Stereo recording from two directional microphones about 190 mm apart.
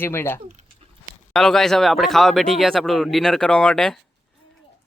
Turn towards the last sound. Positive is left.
turn(degrees=5)  # may be behind; listen again after turning